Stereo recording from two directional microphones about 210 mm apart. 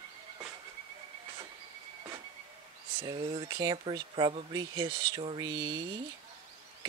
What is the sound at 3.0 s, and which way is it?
Speech, 20° right (ahead or behind).